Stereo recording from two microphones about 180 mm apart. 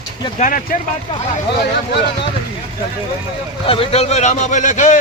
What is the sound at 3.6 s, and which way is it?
A man's voice, 30° left (ahead or behind).